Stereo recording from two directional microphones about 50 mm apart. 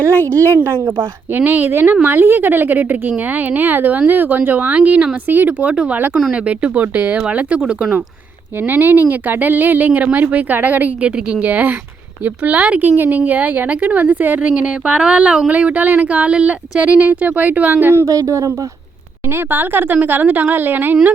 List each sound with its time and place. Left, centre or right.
0.1 s a woman's voice: right
0.6 s a woman's voice: right
5.5 s a woman's voice: right
6.8 s a woman's voice: right
7.2 s a woman's voice: right
8.6 s a woman's voice: right; by 15.4 s centre
15.4 s a woman's voice: right
18.0 s speech: right
19.3 s a woman's voice: right